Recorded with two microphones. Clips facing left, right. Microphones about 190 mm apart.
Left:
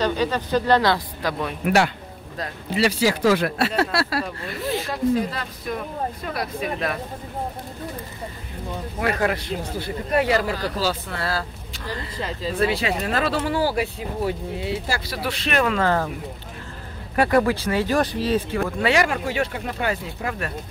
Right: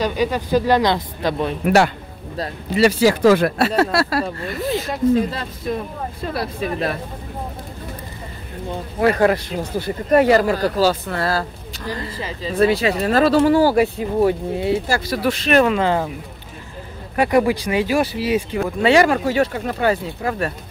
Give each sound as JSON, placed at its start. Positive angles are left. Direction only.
{"t": 0.0, "sound": "speech", "side_deg": -10}
{"t": 2.8, "sound": "speech", "side_deg": -45}
{"t": 5.1, "sound": "speech", "side_deg": -25}
{"t": 9.0, "sound": "speech", "side_deg": -40}
{"t": 12.2, "sound": "speech", "side_deg": 0}
{"t": 12.5, "sound": "speech", "side_deg": -40}
{"t": 15.6, "sound": "speech", "side_deg": -15}
{"t": 17.3, "sound": "speech", "side_deg": -15}
{"t": 18.8, "sound": "speech", "side_deg": -30}